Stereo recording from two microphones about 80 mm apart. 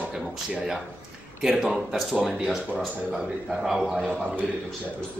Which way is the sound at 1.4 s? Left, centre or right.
Centre.